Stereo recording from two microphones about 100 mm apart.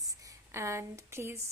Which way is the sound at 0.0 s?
35° right (ahead or behind).